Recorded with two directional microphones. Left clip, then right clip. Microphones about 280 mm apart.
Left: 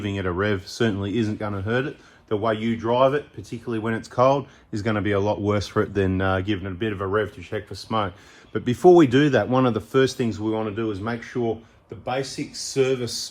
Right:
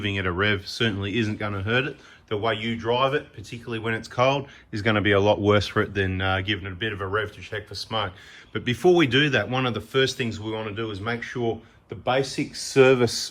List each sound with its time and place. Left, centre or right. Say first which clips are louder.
0.0 s speech: right 1 dB; centre